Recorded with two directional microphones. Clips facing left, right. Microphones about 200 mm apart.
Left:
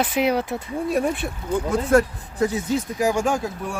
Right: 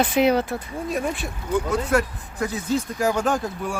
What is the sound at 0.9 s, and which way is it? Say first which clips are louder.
Speech: left 4 dB; 60° left (ahead or behind).